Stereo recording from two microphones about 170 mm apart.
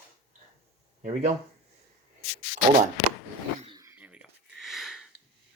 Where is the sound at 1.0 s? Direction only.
45° right (ahead or behind).